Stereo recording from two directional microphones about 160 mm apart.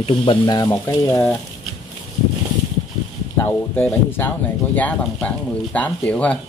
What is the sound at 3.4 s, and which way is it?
Speech, 15° left (ahead or behind).